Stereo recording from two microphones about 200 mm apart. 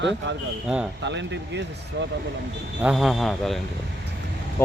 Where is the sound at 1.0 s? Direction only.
60° right (ahead or behind).